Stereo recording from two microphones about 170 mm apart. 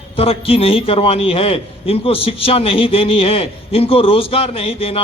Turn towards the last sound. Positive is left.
turn(degrees=35)  # may be behind; listen again after turning